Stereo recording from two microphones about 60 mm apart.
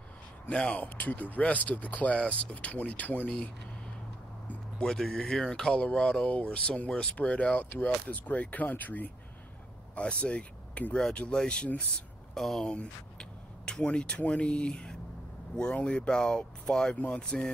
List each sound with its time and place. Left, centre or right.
0.5 s speech: left
4.7 s speech: centre
12.4 s speech: centre
16.9 s speech: left
17.2 s speech: centre